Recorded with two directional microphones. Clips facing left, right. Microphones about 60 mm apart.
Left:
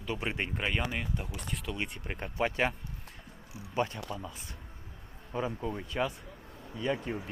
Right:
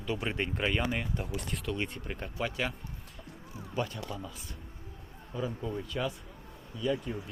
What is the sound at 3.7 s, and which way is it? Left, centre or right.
Speech, left.